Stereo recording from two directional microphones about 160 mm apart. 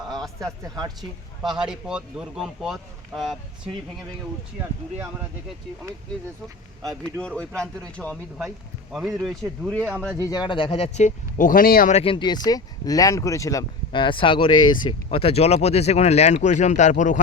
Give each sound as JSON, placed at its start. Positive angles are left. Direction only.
{"t": 0.3, "sound": "a man's voice", "side_deg": -20}
{"t": 1.5, "sound": "speech", "side_deg": -5}
{"t": 7.0, "sound": "speech", "side_deg": 5}
{"t": 10.2, "sound": "speech", "side_deg": 25}
{"t": 11.9, "sound": "speech", "side_deg": 40}